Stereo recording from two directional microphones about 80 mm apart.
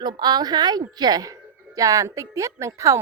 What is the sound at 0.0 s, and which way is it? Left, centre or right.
A woman's voice, right.